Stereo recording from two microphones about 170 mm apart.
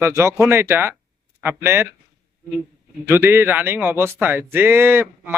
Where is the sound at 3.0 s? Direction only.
15° right (ahead or behind).